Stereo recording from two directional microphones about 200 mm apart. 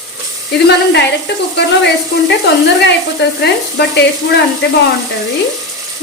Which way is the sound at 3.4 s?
55° left (ahead or behind).